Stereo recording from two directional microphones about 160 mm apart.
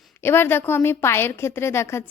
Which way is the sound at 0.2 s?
15° left (ahead or behind).